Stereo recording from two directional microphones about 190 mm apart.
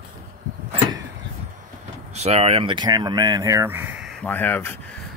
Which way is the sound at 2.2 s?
35° right (ahead or behind).